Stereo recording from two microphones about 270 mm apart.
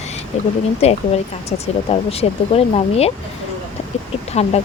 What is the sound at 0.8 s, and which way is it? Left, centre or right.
Speech, left.